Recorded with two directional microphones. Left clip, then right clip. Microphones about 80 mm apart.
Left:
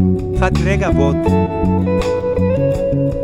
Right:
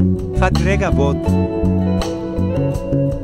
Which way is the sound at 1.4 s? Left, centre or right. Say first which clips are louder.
Left 2 dB; left.